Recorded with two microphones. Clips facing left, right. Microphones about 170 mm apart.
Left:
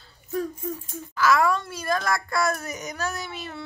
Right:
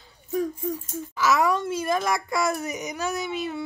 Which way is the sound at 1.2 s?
20° right (ahead or behind).